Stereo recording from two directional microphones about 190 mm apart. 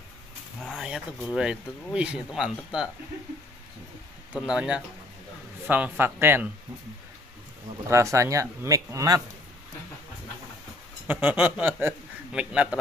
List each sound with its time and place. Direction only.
0.6 s speech: centre (ahead or behind)
4.3 s speech: 5° right (ahead or behind)
7.9 s speech: 15° right (ahead or behind)
11.1 s a man's voice: 10° right (ahead or behind)